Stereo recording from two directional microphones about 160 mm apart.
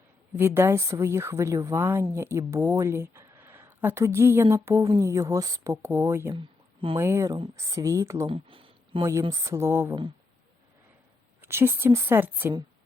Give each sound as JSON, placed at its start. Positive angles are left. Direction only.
{"t": 0.3, "sound": "speech", "side_deg": -15}
{"t": 8.3, "sound": "a sound", "side_deg": -35}
{"t": 9.3, "sound": "speech", "side_deg": -20}
{"t": 11.4, "sound": "speech", "side_deg": -15}